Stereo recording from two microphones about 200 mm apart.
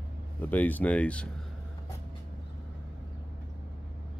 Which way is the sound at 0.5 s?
10° left (ahead or behind).